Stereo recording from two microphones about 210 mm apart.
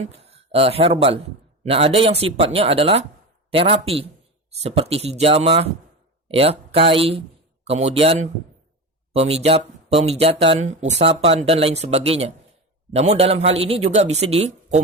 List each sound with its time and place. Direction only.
0.0 s speech: 30° right (ahead or behind)